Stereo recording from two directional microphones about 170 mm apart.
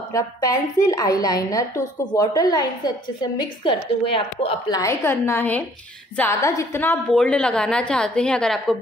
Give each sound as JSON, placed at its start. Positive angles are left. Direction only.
{"t": 0.1, "sound": "a woman's voice", "side_deg": 20}
{"t": 4.7, "sound": "a woman's voice", "side_deg": 15}